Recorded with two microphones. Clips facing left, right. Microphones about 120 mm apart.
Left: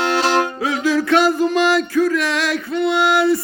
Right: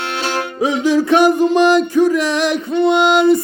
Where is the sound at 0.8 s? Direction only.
20° right (ahead or behind).